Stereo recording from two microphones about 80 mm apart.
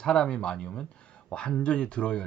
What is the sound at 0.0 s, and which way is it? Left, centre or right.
Speech, centre.